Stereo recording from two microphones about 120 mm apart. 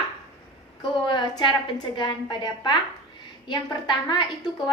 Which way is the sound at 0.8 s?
40° left (ahead or behind).